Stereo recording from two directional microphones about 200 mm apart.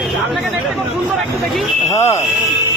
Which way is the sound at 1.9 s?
15° left (ahead or behind).